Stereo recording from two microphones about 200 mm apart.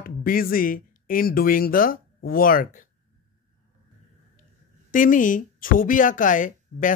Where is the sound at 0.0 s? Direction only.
45° left (ahead or behind).